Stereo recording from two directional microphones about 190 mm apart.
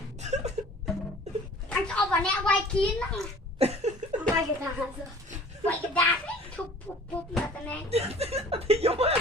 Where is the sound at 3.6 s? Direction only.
35° right (ahead or behind).